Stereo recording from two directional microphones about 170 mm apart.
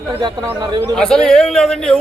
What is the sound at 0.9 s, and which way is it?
A man's voice, 5° left (ahead or behind).